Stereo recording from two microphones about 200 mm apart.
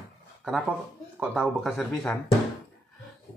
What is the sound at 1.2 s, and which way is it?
Speech, 5° right (ahead or behind).